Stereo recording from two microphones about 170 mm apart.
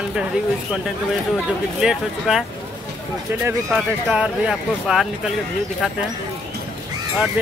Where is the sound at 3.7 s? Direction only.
5° right (ahead or behind).